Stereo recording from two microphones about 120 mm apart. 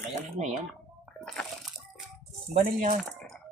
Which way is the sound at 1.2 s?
Centre (ahead or behind).